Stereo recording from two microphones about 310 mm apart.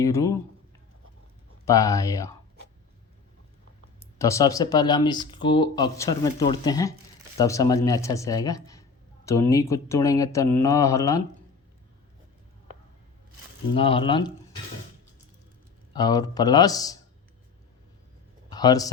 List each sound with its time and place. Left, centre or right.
0.0 s speech: centre
1.6 s speech: centre
4.2 s speech: centre
13.7 s speech: centre
15.9 s speech: centre
18.5 s speech: centre